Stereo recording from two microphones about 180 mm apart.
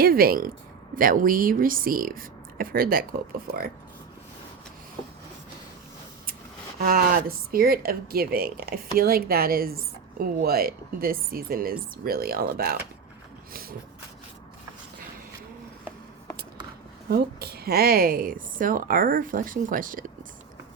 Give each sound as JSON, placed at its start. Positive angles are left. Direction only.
{"t": 0.0, "sound": "a woman's voice", "side_deg": -55}
{"t": 6.7, "sound": "speech", "side_deg": -55}
{"t": 13.5, "sound": "a sound", "side_deg": -55}
{"t": 17.1, "sound": "a woman's voice", "side_deg": -60}